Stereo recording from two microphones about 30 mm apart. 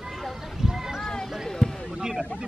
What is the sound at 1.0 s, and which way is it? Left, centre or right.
Basketball bounce, left.